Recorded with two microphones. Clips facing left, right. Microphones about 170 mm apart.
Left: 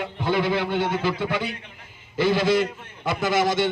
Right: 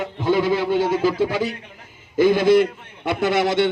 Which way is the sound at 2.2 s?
50° right (ahead or behind).